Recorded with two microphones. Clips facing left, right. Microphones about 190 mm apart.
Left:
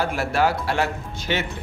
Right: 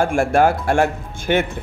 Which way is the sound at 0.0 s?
50° right (ahead or behind).